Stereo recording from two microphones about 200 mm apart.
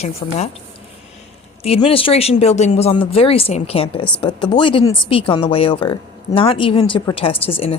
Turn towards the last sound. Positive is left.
turn(degrees=30)  # may be behind; listen again after turning